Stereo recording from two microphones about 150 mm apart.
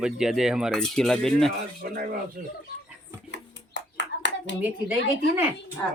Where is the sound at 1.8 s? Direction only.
75° right (ahead or behind).